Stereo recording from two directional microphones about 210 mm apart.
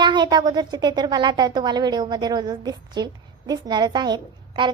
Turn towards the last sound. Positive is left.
turn(degrees=-20)  # may be behind; listen again after turning